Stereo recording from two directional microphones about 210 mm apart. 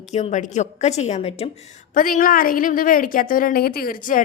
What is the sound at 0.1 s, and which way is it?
A woman's voice, 35° left (ahead or behind).